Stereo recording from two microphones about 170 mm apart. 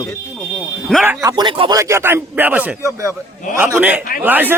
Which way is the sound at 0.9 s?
5° left (ahead or behind).